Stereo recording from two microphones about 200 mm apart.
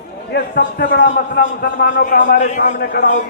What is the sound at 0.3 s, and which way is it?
A man's voice, 55° left (ahead or behind).